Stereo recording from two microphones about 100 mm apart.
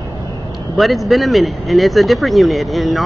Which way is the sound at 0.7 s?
Centre (ahead or behind).